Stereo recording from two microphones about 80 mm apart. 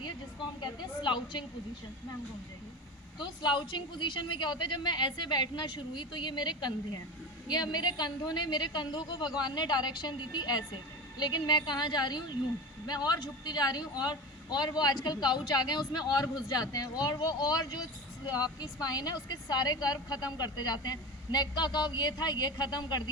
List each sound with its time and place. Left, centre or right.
0.6 s a woman's voice: left
3.2 s a woman's voice: left